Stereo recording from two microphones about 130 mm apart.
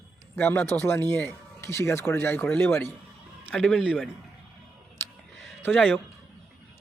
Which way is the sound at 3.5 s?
5° left (ahead or behind).